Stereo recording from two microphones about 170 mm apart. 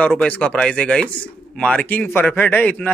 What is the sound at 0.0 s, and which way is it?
A man's voice, 5° left (ahead or behind).